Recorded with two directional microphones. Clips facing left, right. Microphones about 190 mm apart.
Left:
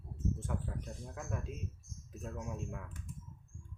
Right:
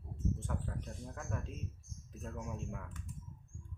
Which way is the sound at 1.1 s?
5° left (ahead or behind).